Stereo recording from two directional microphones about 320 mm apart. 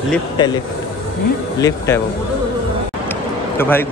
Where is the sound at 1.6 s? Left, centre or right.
Centre.